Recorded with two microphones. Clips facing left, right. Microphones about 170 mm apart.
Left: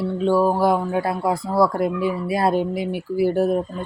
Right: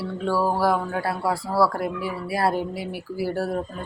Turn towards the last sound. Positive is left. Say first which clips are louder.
# left 6 dB
turn(degrees=20)  # may be behind; listen again after turning